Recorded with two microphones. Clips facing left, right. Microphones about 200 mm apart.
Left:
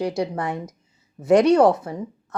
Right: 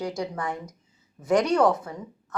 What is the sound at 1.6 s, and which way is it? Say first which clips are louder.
Speech: left 5 dB; 25° left (ahead or behind).